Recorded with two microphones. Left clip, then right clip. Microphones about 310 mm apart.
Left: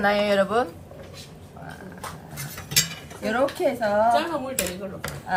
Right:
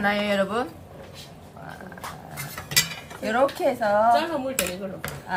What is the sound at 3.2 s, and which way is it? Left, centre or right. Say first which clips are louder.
A woman's voice: right 1 dB; centre.